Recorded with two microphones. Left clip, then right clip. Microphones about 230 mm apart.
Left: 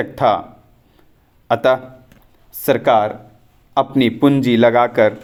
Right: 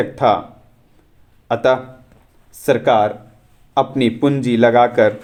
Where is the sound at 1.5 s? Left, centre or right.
Left.